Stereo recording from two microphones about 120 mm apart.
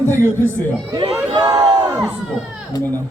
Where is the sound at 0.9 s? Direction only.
40° right (ahead or behind).